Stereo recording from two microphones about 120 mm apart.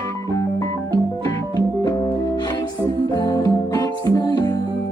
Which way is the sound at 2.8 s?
35° left (ahead or behind).